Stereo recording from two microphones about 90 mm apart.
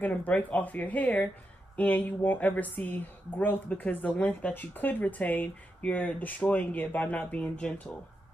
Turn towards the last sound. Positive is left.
turn(degrees=15)  # may be behind; listen again after turning